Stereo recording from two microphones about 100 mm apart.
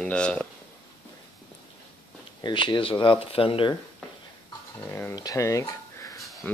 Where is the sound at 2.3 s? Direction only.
50° left (ahead or behind).